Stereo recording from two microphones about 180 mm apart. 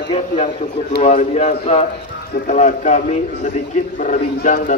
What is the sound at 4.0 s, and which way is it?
Speech, 45° left (ahead or behind).